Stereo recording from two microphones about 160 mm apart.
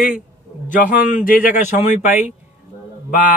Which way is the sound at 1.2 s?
60° left (ahead or behind).